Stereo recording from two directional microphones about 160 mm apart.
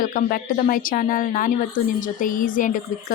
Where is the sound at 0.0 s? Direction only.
60° left (ahead or behind).